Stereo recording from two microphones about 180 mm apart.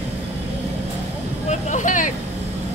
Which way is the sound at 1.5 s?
45° left (ahead or behind).